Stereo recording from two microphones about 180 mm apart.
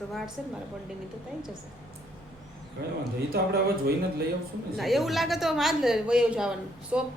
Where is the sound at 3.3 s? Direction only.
60° right (ahead or behind).